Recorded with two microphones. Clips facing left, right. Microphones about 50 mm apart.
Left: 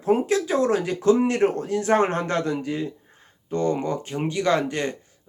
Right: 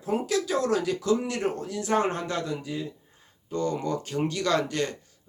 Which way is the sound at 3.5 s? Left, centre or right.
Left.